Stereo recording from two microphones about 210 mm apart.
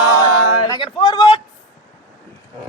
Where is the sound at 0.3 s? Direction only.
90° left.